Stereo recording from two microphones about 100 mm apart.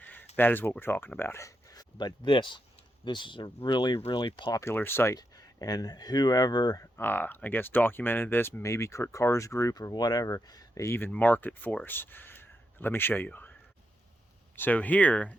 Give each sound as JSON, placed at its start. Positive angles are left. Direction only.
{"t": 0.0, "sound": "a sound", "side_deg": 20}
{"t": 0.3, "sound": "speech", "side_deg": 20}
{"t": 4.4, "sound": "speech", "side_deg": 30}
{"t": 5.1, "sound": "speech", "side_deg": 40}
{"t": 6.9, "sound": "speech", "side_deg": 20}
{"t": 14.5, "sound": "speech", "side_deg": 20}